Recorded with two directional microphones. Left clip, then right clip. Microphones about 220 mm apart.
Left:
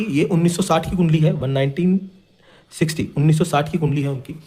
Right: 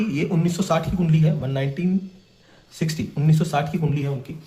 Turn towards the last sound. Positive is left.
turn(degrees=50)  # may be behind; listen again after turning